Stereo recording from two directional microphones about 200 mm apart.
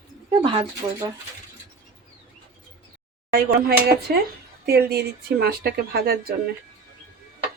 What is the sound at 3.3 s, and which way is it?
Speech, 45° right (ahead or behind).